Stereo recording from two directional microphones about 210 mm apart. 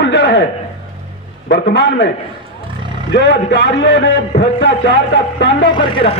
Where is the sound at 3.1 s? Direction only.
55° left (ahead or behind).